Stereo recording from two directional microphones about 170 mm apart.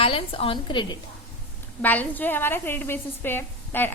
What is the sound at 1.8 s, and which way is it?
A woman's voice, 10° left (ahead or behind).